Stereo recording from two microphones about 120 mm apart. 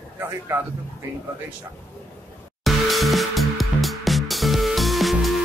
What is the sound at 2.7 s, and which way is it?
Music, centre (ahead or behind).